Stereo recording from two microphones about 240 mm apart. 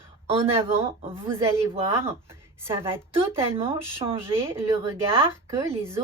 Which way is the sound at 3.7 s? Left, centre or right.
Right.